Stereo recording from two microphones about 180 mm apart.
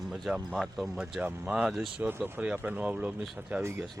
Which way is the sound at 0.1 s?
Centre (ahead or behind).